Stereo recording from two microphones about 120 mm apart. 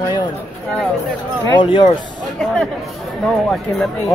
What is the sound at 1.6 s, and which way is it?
Speech, 40° left (ahead or behind).